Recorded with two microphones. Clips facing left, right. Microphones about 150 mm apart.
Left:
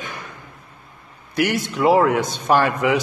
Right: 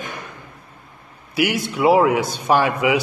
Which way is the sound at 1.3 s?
10° right (ahead or behind).